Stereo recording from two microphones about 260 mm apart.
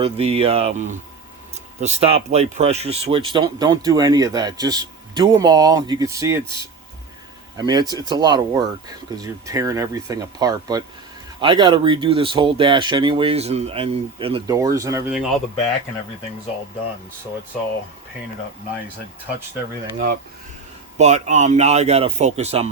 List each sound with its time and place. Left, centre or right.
0.0 s speech: right
7.5 s speech: centre
21.0 s speech: right